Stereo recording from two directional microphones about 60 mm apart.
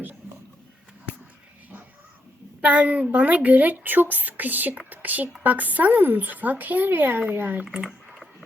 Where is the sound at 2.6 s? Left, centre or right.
Right.